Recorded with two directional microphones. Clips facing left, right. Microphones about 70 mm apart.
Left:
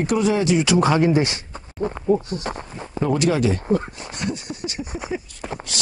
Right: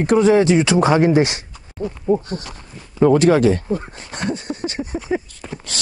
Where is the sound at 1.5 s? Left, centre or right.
Left.